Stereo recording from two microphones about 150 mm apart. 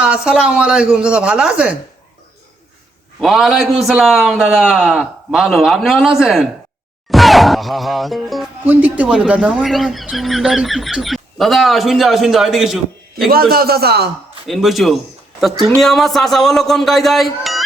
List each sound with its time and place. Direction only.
0.0 s speech: 5° right (ahead or behind)
3.2 s speech: centre (ahead or behind)
8.6 s speech: 10° right (ahead or behind)
13.3 s a man's voice: 90° right
14.4 s speech: centre (ahead or behind)